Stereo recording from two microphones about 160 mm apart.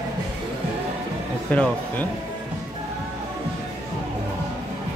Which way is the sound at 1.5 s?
10° left (ahead or behind).